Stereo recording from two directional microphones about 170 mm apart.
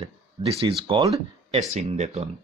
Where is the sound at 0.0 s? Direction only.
35° right (ahead or behind).